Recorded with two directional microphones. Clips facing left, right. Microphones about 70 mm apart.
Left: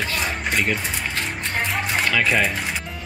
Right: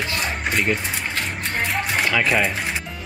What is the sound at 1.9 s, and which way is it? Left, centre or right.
Speech, centre.